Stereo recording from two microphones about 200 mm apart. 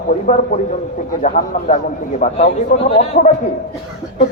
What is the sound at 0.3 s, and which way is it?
A man's voice, 40° left (ahead or behind).